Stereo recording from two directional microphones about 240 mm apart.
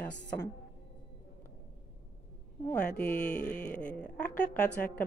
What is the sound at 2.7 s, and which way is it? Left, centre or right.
A woman's voice, centre.